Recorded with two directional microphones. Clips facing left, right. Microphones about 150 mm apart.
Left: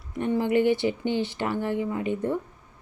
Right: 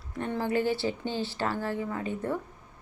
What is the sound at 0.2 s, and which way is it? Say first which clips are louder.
A woman's voice: left 6 dB; 15° left (ahead or behind).